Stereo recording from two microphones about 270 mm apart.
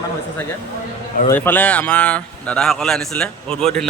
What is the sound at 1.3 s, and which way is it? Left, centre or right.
Speech, centre.